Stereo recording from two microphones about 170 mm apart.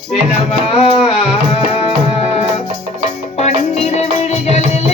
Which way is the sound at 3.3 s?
40° left (ahead or behind).